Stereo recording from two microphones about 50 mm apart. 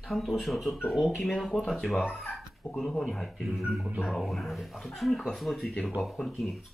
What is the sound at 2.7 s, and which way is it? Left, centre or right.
Speech, centre.